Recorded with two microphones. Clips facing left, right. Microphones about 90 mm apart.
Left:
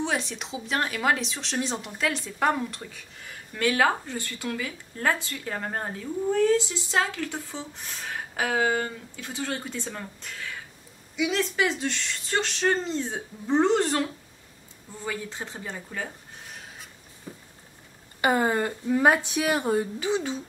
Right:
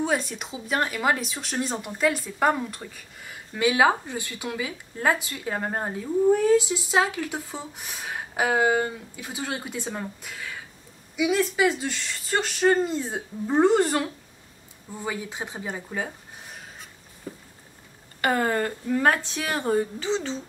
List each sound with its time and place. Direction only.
0.3 s speech: 5° right (ahead or behind)
18.2 s speech: 15° left (ahead or behind)